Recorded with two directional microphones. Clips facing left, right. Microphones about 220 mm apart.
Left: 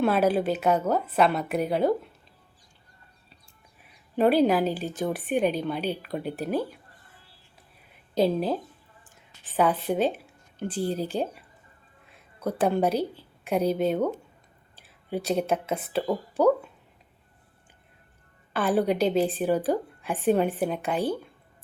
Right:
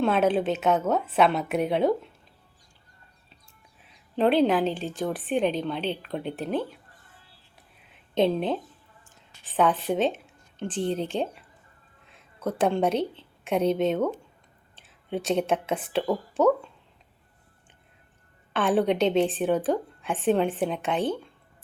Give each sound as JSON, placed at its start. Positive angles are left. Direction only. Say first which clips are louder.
{"t": 0.0, "sound": "a woman's voice", "louder": "even", "side_deg": 5}
{"t": 1.0, "sound": "a woman's voice", "louder": "right 1 dB", "side_deg": -5}
{"t": 4.1, "sound": "a woman's voice", "louder": "left 1 dB", "side_deg": 10}
{"t": 8.2, "sound": "a woman's voice", "louder": "even", "side_deg": 5}
{"t": 13.0, "sound": "a woman's voice", "louder": "right 1 dB", "side_deg": -25}
{"t": 13.7, "sound": "a woman's voice", "louder": "right 1 dB", "side_deg": 10}
{"t": 15.1, "sound": "a woman's voice", "louder": "right 1 dB", "side_deg": 5}
{"t": 18.5, "sound": "a woman's voice", "louder": "right 1 dB", "side_deg": 10}